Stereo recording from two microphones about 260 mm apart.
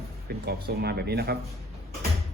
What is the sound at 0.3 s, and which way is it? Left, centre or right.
Speech, right.